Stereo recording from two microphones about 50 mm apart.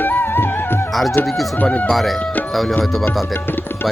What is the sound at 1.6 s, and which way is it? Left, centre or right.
Music, left.